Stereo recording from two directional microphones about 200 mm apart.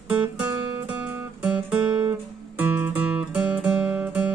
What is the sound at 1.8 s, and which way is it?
Guitar, 25° right (ahead or behind).